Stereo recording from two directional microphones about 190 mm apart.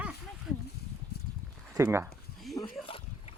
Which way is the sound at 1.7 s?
15° right (ahead or behind).